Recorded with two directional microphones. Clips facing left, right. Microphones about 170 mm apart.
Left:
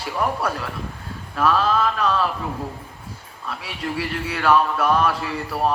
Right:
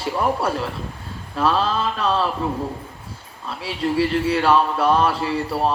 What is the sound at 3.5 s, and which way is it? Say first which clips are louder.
Speech: right 5 dB; 30° right (ahead or behind).